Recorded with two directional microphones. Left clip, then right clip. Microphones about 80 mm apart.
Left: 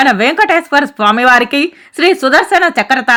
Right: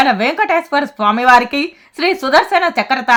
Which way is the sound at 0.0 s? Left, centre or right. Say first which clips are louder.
Left 4 dB; left.